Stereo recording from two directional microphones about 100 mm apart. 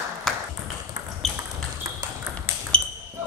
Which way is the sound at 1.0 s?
30° right (ahead or behind).